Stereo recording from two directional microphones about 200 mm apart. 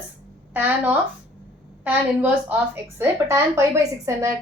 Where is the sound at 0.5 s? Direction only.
5° right (ahead or behind).